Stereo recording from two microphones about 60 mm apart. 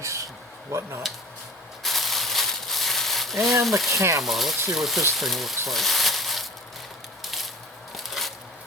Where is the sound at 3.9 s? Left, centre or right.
Right.